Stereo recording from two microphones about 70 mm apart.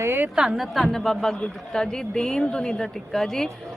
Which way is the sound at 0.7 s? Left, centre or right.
Centre.